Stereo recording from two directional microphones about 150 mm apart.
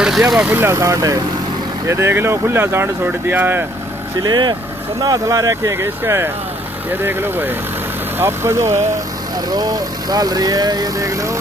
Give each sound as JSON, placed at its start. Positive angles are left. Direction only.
{"t": 0.0, "sound": "speech", "side_deg": -5}
{"t": 0.6, "sound": "speech", "side_deg": -20}
{"t": 4.2, "sound": "speech", "side_deg": -30}